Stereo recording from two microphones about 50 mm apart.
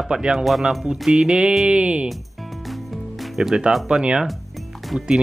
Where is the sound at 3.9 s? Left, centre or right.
Centre.